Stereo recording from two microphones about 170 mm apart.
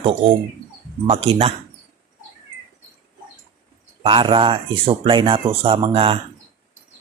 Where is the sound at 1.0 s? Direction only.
35° right (ahead or behind).